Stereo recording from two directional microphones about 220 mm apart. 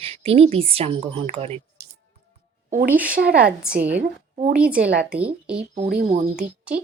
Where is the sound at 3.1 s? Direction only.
45° right (ahead or behind).